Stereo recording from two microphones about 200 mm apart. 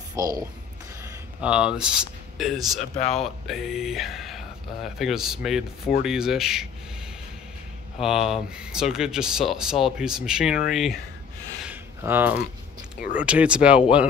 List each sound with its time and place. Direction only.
0.1 s speech: 20° right (ahead or behind)
1.4 s speech: 5° right (ahead or behind)
8.0 s speech: centre (ahead or behind)
11.6 s a sound: 10° right (ahead or behind)
13.2 s speech: 5° right (ahead or behind)